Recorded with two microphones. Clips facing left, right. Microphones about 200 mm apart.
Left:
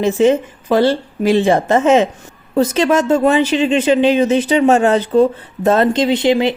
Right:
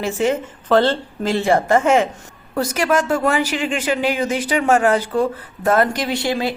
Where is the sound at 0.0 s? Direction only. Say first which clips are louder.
Left 7 dB; 20° left (ahead or behind).